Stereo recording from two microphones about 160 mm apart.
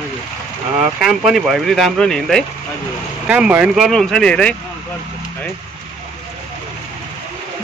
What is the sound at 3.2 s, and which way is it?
Speech, 10° right (ahead or behind).